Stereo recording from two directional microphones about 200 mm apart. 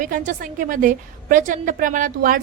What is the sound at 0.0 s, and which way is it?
A woman's voice, 40° right (ahead or behind).